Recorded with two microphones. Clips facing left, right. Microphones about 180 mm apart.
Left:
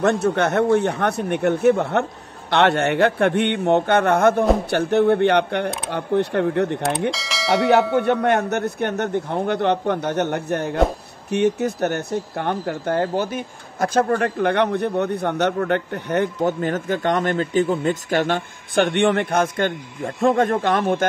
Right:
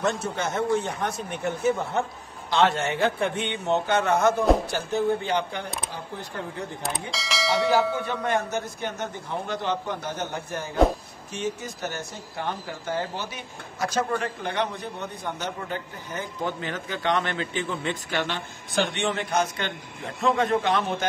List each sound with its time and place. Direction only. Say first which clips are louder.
0.0 s speech: left 9 dB; 60° left (ahead or behind)
7.1 s speech: left 6 dB; centre (ahead or behind)
7.9 s speech: left 8 dB; 65° left (ahead or behind)
16.4 s a man's voice: left 9 dB; 45° left (ahead or behind)